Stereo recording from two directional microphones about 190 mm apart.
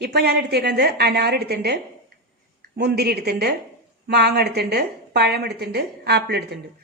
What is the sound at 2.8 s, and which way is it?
A woman's voice, 55° right (ahead or behind).